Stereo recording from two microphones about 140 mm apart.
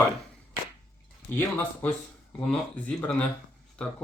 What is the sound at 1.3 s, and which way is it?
Speech, 15° left (ahead or behind).